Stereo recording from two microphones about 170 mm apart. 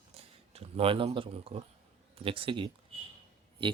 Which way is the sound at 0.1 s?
35° right (ahead or behind).